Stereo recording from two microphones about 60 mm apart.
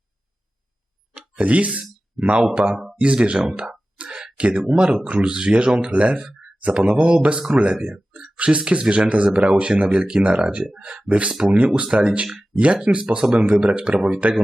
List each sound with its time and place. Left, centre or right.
1.4 s speech: right